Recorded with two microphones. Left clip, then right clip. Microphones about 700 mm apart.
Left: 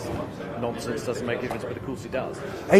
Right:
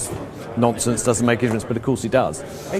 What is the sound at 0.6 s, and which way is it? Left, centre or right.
Speech, right.